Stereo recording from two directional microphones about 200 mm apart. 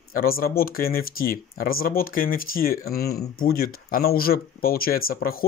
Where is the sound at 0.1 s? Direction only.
45° left (ahead or behind).